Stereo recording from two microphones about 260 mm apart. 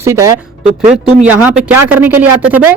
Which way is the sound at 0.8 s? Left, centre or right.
Right.